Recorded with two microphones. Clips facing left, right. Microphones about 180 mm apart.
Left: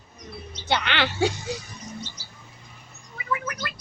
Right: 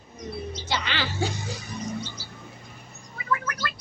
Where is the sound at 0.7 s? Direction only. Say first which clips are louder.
Left 6 dB; 60° left (ahead or behind).